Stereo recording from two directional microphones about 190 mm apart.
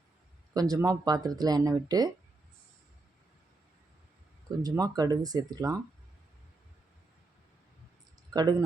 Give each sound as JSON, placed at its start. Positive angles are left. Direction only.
{"t": 0.5, "sound": "speech", "side_deg": -20}
{"t": 4.8, "sound": "speech", "side_deg": -20}
{"t": 8.3, "sound": "speech", "side_deg": -20}